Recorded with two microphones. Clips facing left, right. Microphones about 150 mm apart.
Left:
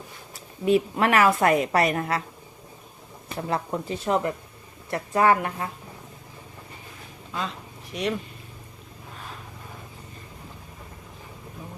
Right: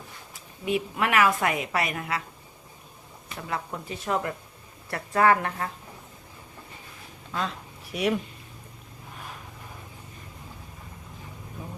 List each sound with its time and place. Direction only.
0.6 s a woman's voice: 35° left (ahead or behind)
3.2 s a woman's voice: 35° left (ahead or behind); by 5.6 s 15° left (ahead or behind)
7.9 s speech: 10° right (ahead or behind)